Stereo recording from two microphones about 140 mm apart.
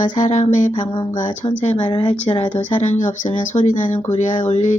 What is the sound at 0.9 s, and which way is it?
Speech, 35° left (ahead or behind).